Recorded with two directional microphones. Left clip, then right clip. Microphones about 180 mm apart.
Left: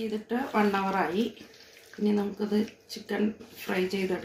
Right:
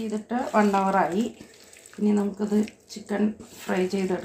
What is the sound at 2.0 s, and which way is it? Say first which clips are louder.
Speech: right 3 dB; 35° right (ahead or behind).